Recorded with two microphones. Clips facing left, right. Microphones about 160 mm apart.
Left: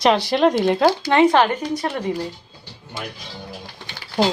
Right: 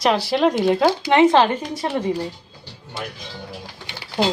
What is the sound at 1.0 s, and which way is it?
Speech, 20° right (ahead or behind).